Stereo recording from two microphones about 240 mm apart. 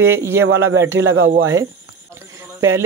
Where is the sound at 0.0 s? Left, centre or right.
Centre.